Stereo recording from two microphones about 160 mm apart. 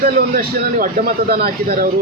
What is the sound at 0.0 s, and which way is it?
A man's voice, 65° right (ahead or behind).